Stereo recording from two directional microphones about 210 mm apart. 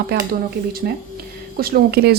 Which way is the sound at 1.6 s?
45° right (ahead or behind).